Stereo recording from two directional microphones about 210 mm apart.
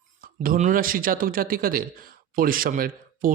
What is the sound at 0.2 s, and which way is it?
A man's voice, 40° right (ahead or behind).